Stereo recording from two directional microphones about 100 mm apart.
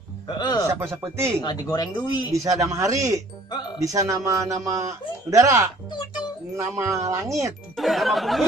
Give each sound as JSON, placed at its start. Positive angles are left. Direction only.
{"t": 0.4, "sound": "a man's voice", "side_deg": 40}
{"t": 0.7, "sound": "speech", "side_deg": -25}
{"t": 1.4, "sound": "speech", "side_deg": 45}
{"t": 2.3, "sound": "speech", "side_deg": -30}
{"t": 7.7, "sound": "speech", "side_deg": 0}